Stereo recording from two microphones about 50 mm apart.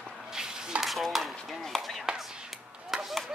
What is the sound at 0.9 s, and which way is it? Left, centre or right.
Chop, centre.